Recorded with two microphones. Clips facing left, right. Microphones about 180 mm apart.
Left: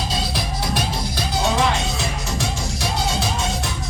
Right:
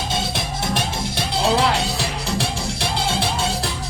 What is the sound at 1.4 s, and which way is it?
Music, 30° right (ahead or behind).